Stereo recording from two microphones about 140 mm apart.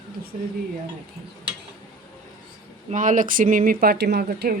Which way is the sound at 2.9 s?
65° right (ahead or behind).